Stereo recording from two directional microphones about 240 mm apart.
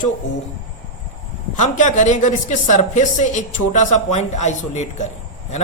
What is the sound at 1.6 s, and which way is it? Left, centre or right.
A woman's voice, left.